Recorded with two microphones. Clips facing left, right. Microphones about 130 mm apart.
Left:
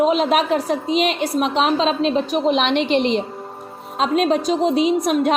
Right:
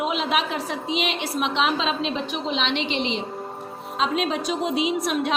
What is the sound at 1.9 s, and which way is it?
Speech, centre (ahead or behind).